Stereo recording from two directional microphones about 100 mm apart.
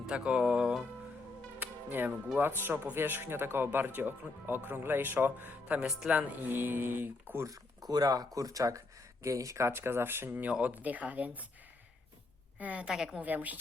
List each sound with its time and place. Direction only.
0.0 s speech: 10° right (ahead or behind)
1.5 s music: 20° right (ahead or behind)
2.4 s speech: 20° right (ahead or behind)
7.4 s speech: 35° right (ahead or behind); by 11.4 s 15° right (ahead or behind)
12.5 s speech: 15° right (ahead or behind)
13.2 s speech: 15° right (ahead or behind)